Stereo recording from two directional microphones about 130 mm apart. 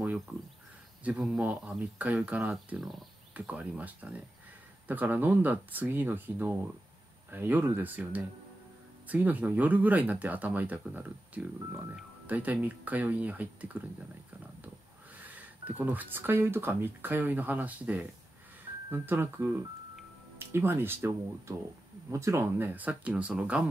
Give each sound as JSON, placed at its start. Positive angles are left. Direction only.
{"t": 1.0, "sound": "speech", "side_deg": -10}
{"t": 3.3, "sound": "speech", "side_deg": -10}
{"t": 15.2, "sound": "speech", "side_deg": -10}